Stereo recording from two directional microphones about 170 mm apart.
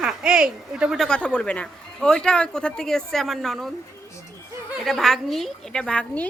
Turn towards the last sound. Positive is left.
turn(degrees=10)  # may be behind; listen again after turning